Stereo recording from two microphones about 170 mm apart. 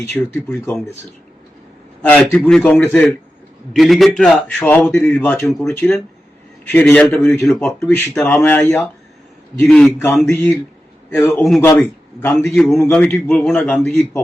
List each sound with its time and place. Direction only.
0.0 s a man's voice: 15° left (ahead or behind)
2.0 s a man's voice: 5° left (ahead or behind)
9.6 s a man's voice: centre (ahead or behind)
10.2 s a man's voice: 15° left (ahead or behind)